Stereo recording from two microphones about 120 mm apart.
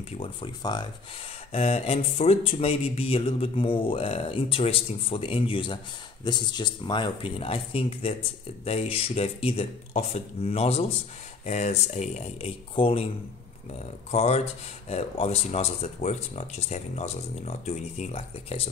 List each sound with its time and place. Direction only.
0.2 s speech: 40° left (ahead or behind)
1.5 s speech: 60° left (ahead or behind)
11.4 s speech: 70° left (ahead or behind); by 13.1 s 50° left (ahead or behind)
13.7 s speech: 60° left (ahead or behind)